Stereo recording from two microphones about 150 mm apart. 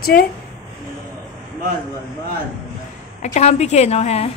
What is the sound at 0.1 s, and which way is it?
Speech, 75° left (ahead or behind).